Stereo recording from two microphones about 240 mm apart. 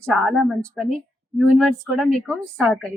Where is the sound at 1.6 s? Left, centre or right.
Centre.